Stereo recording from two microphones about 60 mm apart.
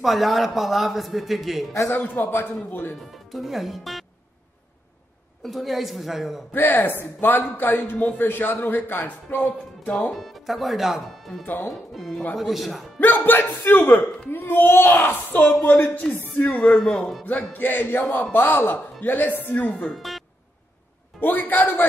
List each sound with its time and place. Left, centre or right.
0.0 s a man's voice: centre
1.9 s speech: left
3.1 s speech: centre
5.4 s a man's voice: centre
6.5 s speech: left
10.1 s a man's voice: centre
11.4 s speech: left
11.9 s a man's voice: centre
13.0 s speech: left
16.4 s speech: left
16.7 s speech: centre
17.2 s speech: left
19.9 s speech: centre
21.2 s speech: left